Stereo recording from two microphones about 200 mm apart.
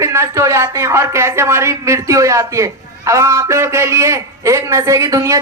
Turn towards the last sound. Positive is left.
turn(degrees=-15)  # may be behind; listen again after turning